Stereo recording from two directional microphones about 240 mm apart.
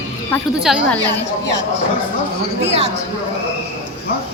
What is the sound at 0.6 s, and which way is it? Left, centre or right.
Speech, centre.